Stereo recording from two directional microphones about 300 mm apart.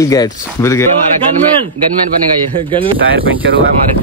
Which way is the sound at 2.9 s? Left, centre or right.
Right.